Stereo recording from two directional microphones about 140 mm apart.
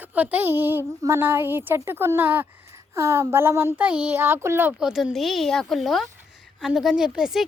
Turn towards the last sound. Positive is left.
turn(degrees=-5)  # may be behind; listen again after turning